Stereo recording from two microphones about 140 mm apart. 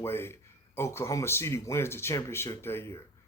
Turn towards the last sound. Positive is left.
turn(degrees=20)  # may be behind; listen again after turning